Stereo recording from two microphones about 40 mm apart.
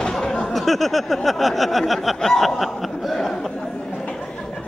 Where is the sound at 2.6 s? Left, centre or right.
Centre.